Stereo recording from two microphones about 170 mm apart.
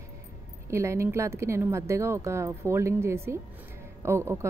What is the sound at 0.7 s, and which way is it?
A woman's voice, 15° right (ahead or behind).